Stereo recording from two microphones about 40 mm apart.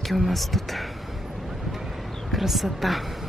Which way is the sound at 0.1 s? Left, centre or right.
Centre.